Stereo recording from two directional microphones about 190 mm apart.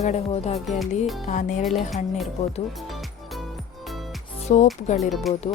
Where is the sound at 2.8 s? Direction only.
Centre (ahead or behind).